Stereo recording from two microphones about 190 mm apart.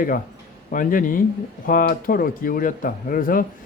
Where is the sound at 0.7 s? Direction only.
45° left (ahead or behind).